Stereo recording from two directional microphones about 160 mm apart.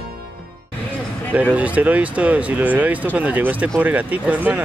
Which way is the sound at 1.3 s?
10° right (ahead or behind).